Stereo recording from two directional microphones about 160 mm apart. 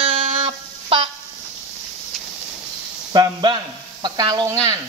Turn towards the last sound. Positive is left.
turn(degrees=-25)  # may be behind; listen again after turning